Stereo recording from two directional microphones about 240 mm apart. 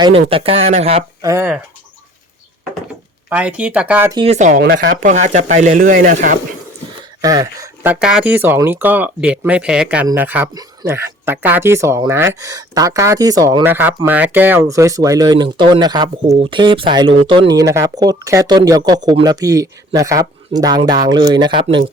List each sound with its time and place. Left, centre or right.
0.3 s speech: right
1.3 s speech: centre
3.2 s speech: centre
4.2 s speech: right
5.1 s speech: right
7.2 s speech: centre